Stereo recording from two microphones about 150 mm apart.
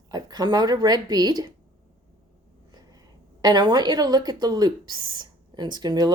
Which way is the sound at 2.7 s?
25° right (ahead or behind).